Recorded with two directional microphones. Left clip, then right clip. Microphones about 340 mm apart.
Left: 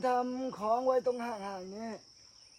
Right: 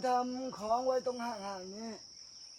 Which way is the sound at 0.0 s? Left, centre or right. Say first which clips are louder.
Left 1 dB; centre.